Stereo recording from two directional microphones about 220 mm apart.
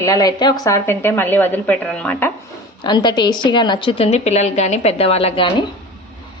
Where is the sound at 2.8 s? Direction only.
20° left (ahead or behind).